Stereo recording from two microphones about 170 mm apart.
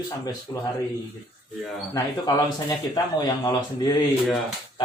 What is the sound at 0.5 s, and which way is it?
Speech, 20° left (ahead or behind).